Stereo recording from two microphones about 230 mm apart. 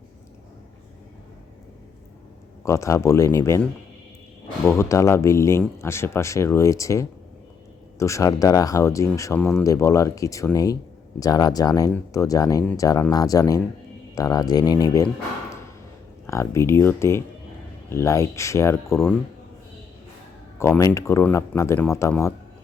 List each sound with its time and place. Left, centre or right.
2.6 s speech: centre
4.6 s speech: centre
16.2 s speech: centre
20.6 s speech: centre